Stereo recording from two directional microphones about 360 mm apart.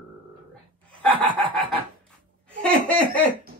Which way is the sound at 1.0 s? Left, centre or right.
Centre.